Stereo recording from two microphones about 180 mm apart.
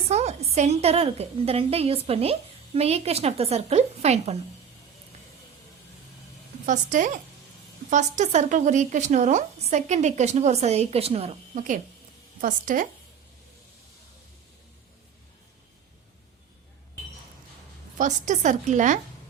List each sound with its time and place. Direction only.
0.1 s a woman's voice: 35° right (ahead or behind)
6.7 s a woman's voice: 45° right (ahead or behind)
17.9 s a woman's voice: 45° right (ahead or behind)